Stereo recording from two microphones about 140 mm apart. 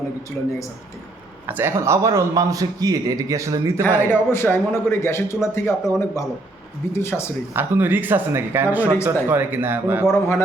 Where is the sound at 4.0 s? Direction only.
15° left (ahead or behind).